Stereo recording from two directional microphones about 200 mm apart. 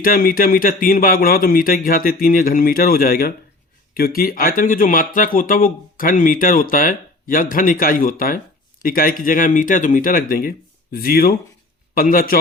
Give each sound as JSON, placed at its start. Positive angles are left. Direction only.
{"t": 0.0, "sound": "speech", "side_deg": 45}